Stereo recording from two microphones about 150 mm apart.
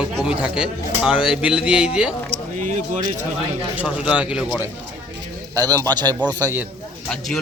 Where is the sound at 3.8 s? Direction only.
10° right (ahead or behind).